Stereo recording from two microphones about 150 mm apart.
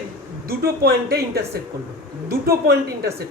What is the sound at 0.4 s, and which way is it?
Speech, 90° right.